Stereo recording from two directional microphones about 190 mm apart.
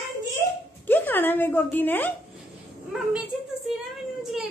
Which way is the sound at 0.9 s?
10° left (ahead or behind).